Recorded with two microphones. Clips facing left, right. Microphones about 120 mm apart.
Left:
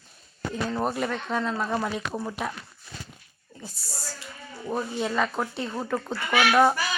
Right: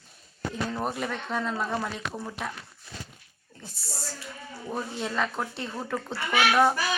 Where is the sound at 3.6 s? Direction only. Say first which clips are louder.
Even; centre (ahead or behind).